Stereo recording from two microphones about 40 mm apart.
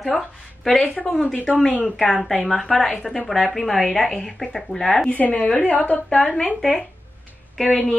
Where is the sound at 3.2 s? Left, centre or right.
Centre.